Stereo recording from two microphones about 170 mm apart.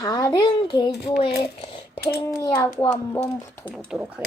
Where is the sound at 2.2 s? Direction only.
20° left (ahead or behind).